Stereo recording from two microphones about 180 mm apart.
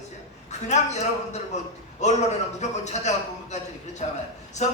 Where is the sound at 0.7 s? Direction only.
40° left (ahead or behind).